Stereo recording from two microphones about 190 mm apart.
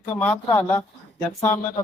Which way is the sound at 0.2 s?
10° left (ahead or behind).